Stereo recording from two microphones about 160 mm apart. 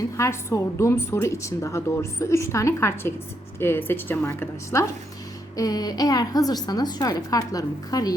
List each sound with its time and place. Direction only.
0.2 s a woman's voice: 15° left (ahead or behind)